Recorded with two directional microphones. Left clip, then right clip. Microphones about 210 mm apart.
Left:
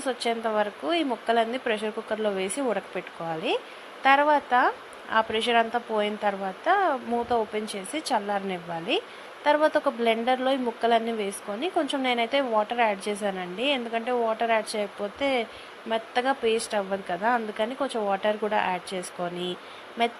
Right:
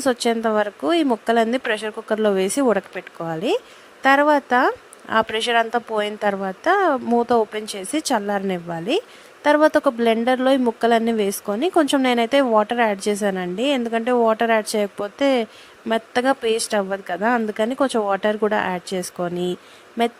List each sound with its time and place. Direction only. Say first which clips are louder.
0.0 s speech: right 7 dB; 50° right (ahead or behind)